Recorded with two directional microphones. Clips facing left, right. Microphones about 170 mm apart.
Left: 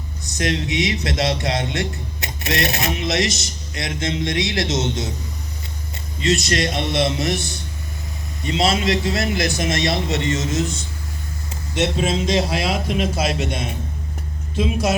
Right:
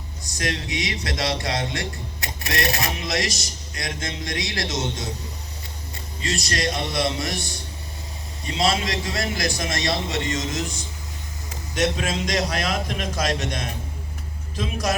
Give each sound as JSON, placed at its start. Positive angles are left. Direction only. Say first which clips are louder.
{"t": 0.3, "sound": "speech", "louder": "left 6 dB", "side_deg": 25}
{"t": 6.2, "sound": "speech", "louder": "left 6 dB", "side_deg": 25}
{"t": 8.4, "sound": "speech", "louder": "left 4 dB", "side_deg": 25}
{"t": 12.4, "sound": "speech", "louder": "left 3 dB", "side_deg": 5}